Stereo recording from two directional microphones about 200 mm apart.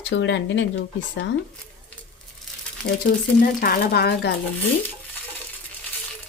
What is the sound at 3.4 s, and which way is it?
Speech, 45° left (ahead or behind).